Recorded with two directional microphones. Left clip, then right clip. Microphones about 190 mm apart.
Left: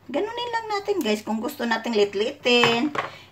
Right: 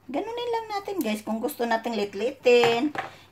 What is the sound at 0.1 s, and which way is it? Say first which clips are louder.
A woman's voice: left 2 dB; 35° right (ahead or behind).